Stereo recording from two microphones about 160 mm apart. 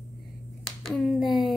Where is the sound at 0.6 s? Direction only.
Centre (ahead or behind).